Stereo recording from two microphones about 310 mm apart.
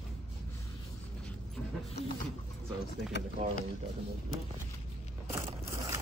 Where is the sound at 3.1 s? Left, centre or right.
Left.